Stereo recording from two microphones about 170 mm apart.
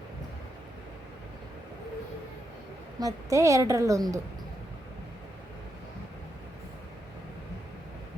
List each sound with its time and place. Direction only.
3.0 s a woman's voice: 20° right (ahead or behind)